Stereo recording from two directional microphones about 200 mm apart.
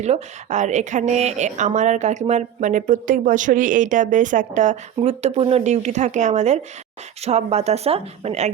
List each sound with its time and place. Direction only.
0.0 s speech: 35° right (ahead or behind)